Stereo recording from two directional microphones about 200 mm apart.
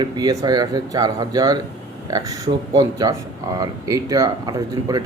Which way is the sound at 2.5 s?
40° right (ahead or behind).